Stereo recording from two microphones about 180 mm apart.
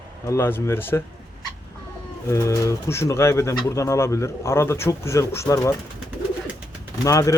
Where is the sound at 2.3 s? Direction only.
15° left (ahead or behind).